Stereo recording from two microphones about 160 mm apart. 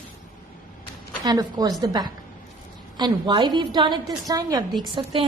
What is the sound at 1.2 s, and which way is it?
A woman's voice, 25° right (ahead or behind).